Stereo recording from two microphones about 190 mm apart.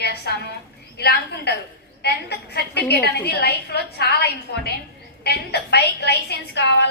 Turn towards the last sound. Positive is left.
turn(degrees=60)  # may be behind; listen again after turning